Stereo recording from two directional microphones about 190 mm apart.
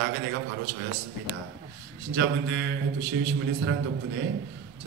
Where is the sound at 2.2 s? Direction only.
65° right (ahead or behind).